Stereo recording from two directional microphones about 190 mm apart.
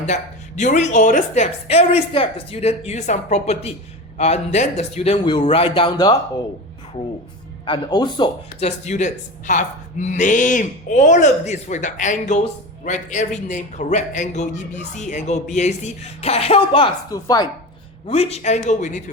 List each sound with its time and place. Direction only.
0.1 s speech: 40° left (ahead or behind); by 6.1 s 25° left (ahead or behind)
7.6 s speech: 25° left (ahead or behind)
8.6 s speech: 35° left (ahead or behind); by 17.5 s 20° left (ahead or behind)
18.0 s speech: 35° left (ahead or behind)